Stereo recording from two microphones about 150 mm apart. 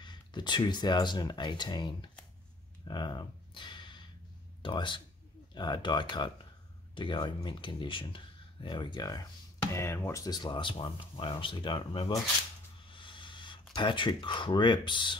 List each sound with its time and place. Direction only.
0.0 s speech: 30° left (ahead or behind)
2.9 s a sound: 30° left (ahead or behind)
4.6 s speech: 30° left (ahead or behind)
9.7 s speech: 15° left (ahead or behind); by 12.1 s 35° left (ahead or behind)
12.8 s vehicle: 35° left (ahead or behind)
13.7 s speech: 30° left (ahead or behind)